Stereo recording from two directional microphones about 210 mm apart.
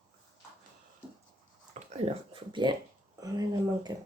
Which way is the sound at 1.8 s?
30° right (ahead or behind).